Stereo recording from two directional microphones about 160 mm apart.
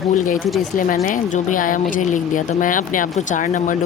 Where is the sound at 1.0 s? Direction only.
55° left (ahead or behind).